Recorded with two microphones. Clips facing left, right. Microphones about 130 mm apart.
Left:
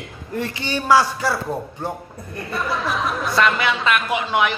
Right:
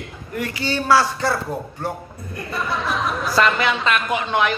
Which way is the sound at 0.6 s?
15° left (ahead or behind).